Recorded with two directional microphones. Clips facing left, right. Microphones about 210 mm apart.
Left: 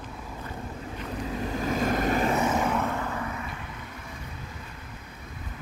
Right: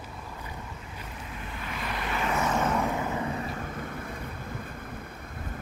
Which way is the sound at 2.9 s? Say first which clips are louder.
Right 2 dB; 20° right (ahead or behind).